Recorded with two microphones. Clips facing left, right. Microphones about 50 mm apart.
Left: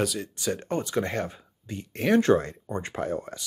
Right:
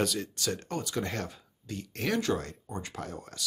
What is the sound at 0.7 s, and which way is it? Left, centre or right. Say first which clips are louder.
Speech: left 6 dB; left.